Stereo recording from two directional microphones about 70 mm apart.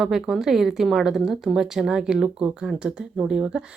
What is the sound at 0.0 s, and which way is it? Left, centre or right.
Speech, centre.